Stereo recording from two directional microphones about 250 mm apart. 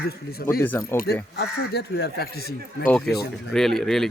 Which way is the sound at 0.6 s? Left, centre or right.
Centre.